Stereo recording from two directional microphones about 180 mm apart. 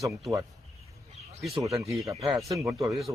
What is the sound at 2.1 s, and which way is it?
Speech, 35° right (ahead or behind).